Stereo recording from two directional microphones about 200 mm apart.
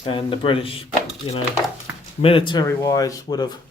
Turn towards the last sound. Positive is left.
turn(degrees=20)  # may be behind; listen again after turning